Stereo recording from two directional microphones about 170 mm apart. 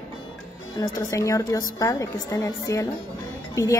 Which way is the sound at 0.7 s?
20° left (ahead or behind).